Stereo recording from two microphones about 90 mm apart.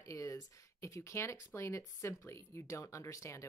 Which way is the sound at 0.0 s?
35° left (ahead or behind).